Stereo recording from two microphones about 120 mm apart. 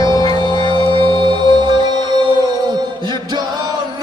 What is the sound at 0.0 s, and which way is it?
Music, 35° left (ahead or behind).